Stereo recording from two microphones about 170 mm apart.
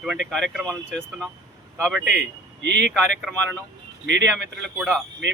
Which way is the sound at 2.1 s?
90° right.